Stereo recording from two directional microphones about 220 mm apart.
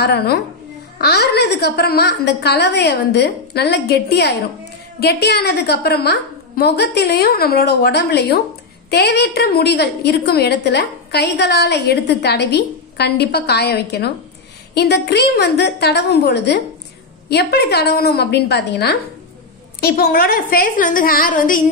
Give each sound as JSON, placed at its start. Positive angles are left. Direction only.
{"t": 0.0, "sound": "a woman's voice", "side_deg": 45}